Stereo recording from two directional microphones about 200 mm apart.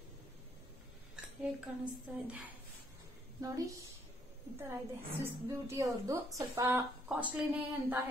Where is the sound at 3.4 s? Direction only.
15° right (ahead or behind).